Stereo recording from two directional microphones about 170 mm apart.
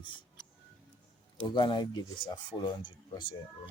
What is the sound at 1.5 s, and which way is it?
Speech, 25° left (ahead or behind).